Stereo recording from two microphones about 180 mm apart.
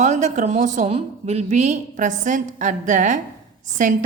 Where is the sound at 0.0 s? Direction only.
40° right (ahead or behind).